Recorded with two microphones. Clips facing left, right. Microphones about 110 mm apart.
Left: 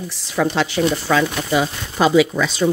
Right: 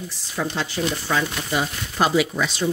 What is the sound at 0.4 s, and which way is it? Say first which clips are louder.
Speech: left 7 dB; 90° left.